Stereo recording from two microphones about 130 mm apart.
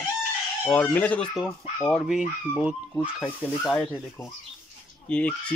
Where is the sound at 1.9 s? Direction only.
Centre (ahead or behind).